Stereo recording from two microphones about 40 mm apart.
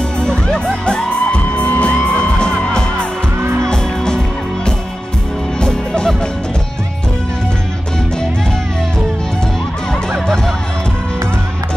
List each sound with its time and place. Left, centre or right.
0.2 s music: left
5.6 s music: centre
10.2 s music: centre